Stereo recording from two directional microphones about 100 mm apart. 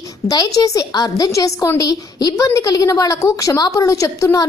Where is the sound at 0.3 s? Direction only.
40° left (ahead or behind).